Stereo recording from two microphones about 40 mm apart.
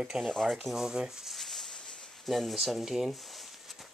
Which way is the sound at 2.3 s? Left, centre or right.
Centre.